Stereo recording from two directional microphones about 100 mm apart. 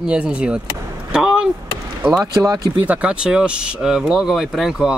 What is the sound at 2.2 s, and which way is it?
Speech, 35° right (ahead or behind).